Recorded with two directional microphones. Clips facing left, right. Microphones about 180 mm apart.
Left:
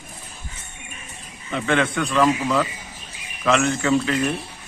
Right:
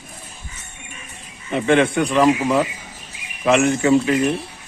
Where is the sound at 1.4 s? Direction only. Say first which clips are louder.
Right 5 dB; 20° right (ahead or behind).